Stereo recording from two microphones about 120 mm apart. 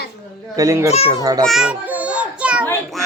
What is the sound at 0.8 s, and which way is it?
Speech, 60° left (ahead or behind).